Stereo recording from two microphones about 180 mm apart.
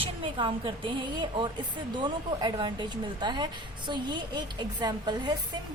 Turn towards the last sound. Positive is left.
turn(degrees=-20)  # may be behind; listen again after turning